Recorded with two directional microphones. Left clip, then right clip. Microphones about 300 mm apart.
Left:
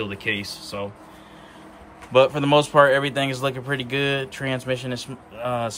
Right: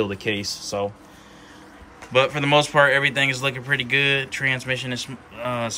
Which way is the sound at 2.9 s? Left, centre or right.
Centre.